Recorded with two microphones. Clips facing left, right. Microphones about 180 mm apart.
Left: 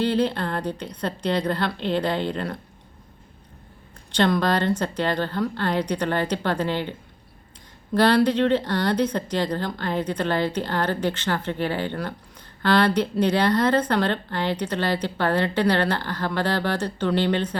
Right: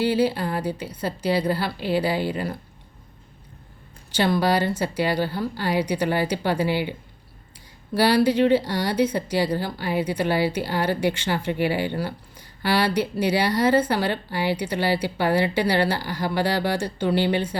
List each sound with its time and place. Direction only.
0.0 s speech: 10° right (ahead or behind)
4.1 s speech: 10° right (ahead or behind)
7.9 s speech: 10° right (ahead or behind)